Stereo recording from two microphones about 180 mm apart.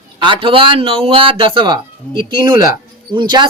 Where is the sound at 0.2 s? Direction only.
30° right (ahead or behind).